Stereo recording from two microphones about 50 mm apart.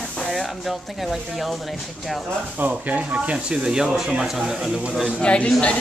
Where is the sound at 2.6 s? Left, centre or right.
Right.